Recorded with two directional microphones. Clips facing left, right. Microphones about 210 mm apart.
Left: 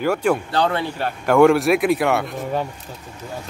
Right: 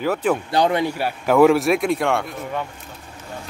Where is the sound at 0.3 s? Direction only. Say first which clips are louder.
Right 1 dB; 15° right (ahead or behind); by 2.3 s 5° left (ahead or behind).